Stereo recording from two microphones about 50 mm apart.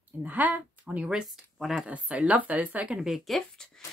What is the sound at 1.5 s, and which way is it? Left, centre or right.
Speech, centre.